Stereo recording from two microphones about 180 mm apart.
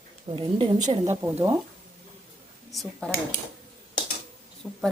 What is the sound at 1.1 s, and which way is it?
Speech, 15° right (ahead or behind).